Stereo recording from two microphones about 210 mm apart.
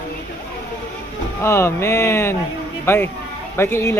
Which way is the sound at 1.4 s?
10° left (ahead or behind).